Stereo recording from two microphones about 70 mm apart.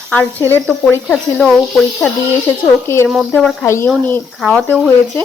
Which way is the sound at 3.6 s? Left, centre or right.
Left.